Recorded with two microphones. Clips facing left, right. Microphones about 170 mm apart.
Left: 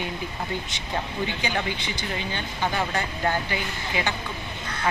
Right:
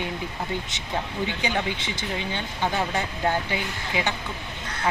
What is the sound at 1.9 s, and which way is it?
Speech, 20° right (ahead or behind).